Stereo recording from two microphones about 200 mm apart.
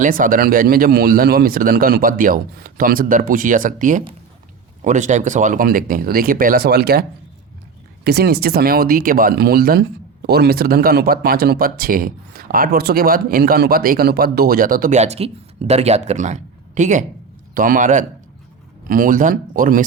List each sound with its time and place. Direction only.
0.0 s speech: 45° right (ahead or behind)
8.0 s a man's voice: 55° right (ahead or behind)